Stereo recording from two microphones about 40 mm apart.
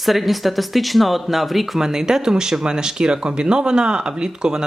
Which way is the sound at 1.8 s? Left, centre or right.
Centre.